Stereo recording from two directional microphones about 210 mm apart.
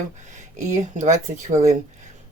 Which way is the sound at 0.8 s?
35° right (ahead or behind).